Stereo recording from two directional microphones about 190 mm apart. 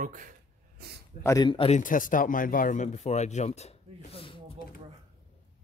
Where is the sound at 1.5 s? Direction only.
30° left (ahead or behind).